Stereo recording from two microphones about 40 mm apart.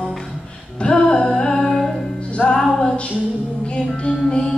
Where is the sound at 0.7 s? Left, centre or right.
Left.